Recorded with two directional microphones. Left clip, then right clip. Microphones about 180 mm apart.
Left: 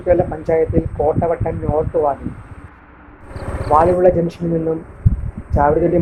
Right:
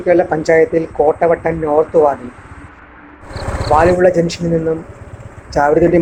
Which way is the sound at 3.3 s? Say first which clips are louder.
Right 5 dB; 40° right (ahead or behind).